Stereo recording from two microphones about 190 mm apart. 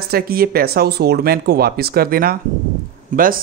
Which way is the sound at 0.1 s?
55° right (ahead or behind).